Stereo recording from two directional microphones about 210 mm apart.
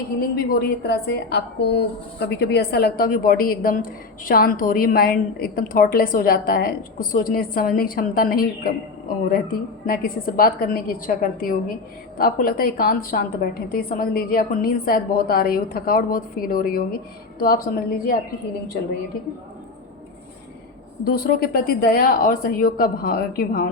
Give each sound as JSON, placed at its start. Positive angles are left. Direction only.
{"t": 0.3, "sound": "a woman's voice", "side_deg": 50}
{"t": 21.0, "sound": "a woman's voice", "side_deg": 45}